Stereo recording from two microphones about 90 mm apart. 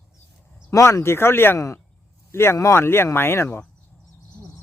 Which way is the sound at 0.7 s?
35° left (ahead or behind).